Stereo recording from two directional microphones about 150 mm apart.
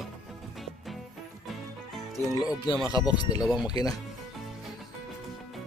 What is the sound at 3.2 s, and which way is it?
Speech, 25° left (ahead or behind).